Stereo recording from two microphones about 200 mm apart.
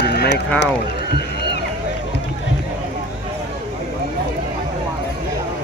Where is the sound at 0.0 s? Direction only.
55° left (ahead or behind).